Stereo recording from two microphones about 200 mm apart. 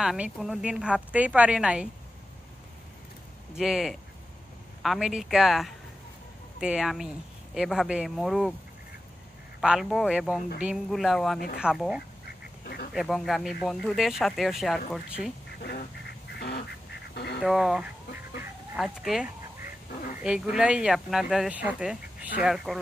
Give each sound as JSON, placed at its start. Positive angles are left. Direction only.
{"t": 0.0, "sound": "speech", "side_deg": 0}
{"t": 3.5, "sound": "speech", "side_deg": 0}
{"t": 9.6, "sound": "speech", "side_deg": 0}
{"t": 12.3, "sound": "duck", "side_deg": 50}
{"t": 12.9, "sound": "speech", "side_deg": 0}
{"t": 16.3, "sound": "duck", "side_deg": 55}
{"t": 17.4, "sound": "speech", "side_deg": 0}